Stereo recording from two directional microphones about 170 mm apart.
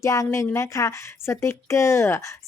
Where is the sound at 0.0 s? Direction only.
15° left (ahead or behind).